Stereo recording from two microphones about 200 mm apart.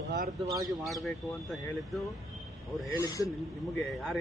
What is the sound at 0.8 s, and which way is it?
Speech, centre (ahead or behind).